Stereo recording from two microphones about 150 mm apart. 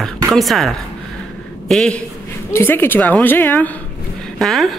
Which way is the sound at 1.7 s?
5° left (ahead or behind).